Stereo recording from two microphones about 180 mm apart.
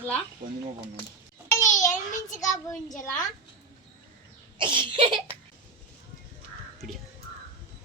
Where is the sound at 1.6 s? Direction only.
45° left (ahead or behind).